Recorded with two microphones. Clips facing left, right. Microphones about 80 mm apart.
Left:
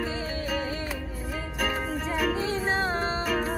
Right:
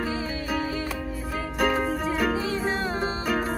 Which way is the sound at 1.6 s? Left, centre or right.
Centre.